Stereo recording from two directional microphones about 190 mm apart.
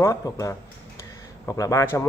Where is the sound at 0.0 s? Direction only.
15° left (ahead or behind).